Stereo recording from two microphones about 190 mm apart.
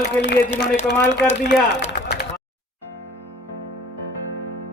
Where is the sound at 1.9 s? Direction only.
60° left (ahead or behind).